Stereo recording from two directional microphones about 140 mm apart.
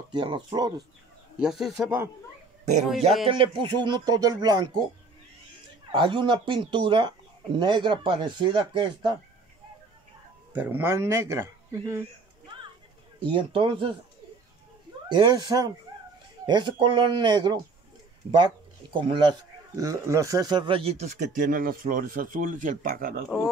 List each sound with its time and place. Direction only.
0.1 s speech: 35° right (ahead or behind)
1.4 s speech: 5° right (ahead or behind)
3.3 s speech: 35° right (ahead or behind)
5.9 s speech: 35° right (ahead or behind)
10.5 s speech: 15° right (ahead or behind)
13.2 s speech: 35° right (ahead or behind)
15.0 s speech: 30° right (ahead or behind)
18.9 s speech: 35° right (ahead or behind)
19.7 s speech: 25° right (ahead or behind)
21.0 s speech: 60° right (ahead or behind); by 23.2 s 85° right